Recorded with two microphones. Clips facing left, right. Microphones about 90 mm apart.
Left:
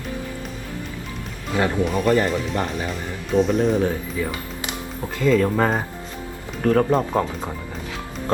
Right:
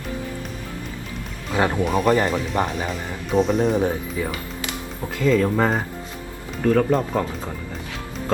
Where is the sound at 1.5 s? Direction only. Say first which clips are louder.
Right 1 dB; 25° right (ahead or behind).